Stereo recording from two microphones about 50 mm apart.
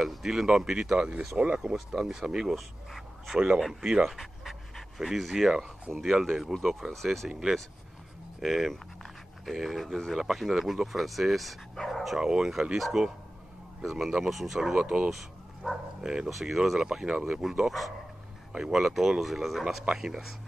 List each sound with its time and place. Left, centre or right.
0.0 s speech: centre
0.9 s speech: centre
2.5 s speech: centre
4.1 s pant: centre
6.2 s speech: centre
8.4 s speech: centre
14.8 s speech: centre
15.6 s speech: centre
16.0 s speech: centre
16.3 s speech: centre
18.5 s speech: centre